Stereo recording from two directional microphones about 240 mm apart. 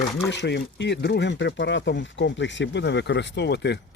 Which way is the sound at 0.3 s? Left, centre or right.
Left.